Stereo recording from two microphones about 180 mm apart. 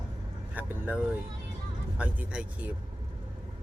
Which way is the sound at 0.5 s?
10° right (ahead or behind).